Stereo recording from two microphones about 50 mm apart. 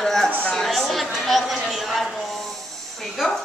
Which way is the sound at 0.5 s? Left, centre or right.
Centre.